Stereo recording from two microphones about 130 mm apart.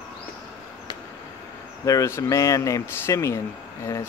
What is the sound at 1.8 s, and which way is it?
Speech, 25° left (ahead or behind).